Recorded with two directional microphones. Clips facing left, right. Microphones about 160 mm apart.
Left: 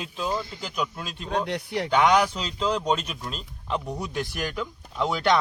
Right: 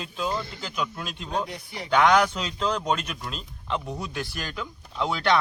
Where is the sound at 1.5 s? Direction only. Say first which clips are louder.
Left 9 dB; 70° left (ahead or behind).